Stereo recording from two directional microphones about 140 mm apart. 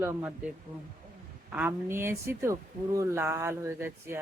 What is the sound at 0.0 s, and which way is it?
Speech, 10° right (ahead or behind).